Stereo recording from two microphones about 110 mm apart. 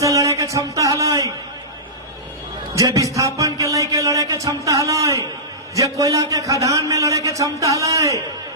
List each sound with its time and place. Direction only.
0.0 s speech: 30° right (ahead or behind)
2.7 s a man's voice: 30° right (ahead or behind)